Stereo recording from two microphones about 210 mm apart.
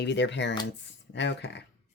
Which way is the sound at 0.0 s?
55° left (ahead or behind).